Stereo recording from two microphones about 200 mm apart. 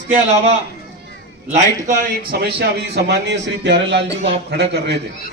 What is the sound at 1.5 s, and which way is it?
Speech, 40° right (ahead or behind).